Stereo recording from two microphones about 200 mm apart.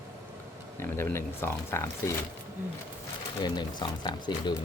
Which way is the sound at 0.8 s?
10° left (ahead or behind).